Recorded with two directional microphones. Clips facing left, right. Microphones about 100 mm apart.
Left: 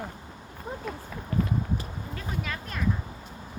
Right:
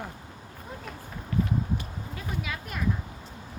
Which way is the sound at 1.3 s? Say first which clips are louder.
Even; 35° left (ahead or behind).